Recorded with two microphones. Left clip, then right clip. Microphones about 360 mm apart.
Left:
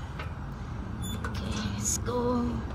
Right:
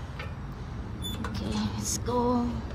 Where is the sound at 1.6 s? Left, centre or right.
Centre.